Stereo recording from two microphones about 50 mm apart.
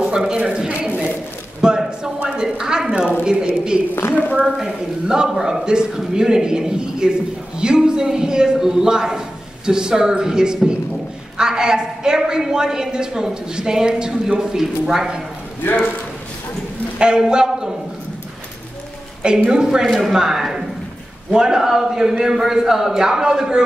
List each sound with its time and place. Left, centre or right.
0.0 s speech: centre
1.6 s a sound: centre
2.2 s a woman's voice: centre
15.6 s a man's voice: left
17.0 s speech: centre
19.2 s speech: centre